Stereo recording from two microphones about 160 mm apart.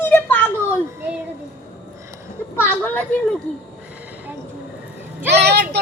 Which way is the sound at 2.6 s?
10° left (ahead or behind).